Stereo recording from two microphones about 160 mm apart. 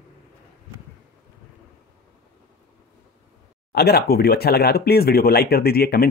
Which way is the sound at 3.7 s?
85° left.